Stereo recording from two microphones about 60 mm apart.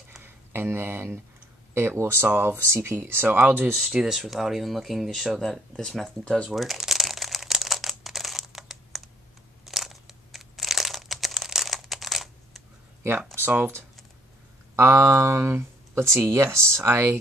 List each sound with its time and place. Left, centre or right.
0.2 s speech: right
3.3 s speech: right
3.7 s speech: centre
6.2 s speech: centre
6.5 s crumpling: centre
14.8 s speech: right